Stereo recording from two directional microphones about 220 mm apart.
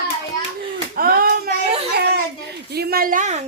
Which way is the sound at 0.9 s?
40° right (ahead or behind).